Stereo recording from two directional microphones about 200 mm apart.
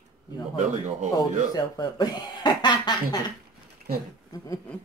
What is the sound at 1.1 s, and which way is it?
Speech, 20° left (ahead or behind).